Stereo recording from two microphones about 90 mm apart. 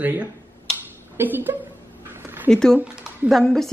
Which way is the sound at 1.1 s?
20° right (ahead or behind).